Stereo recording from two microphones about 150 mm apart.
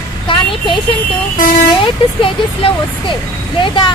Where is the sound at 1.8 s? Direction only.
35° left (ahead or behind).